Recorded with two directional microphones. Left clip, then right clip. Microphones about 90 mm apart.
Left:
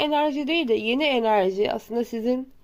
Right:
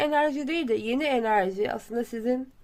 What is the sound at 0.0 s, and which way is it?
A woman's voice, 20° left (ahead or behind).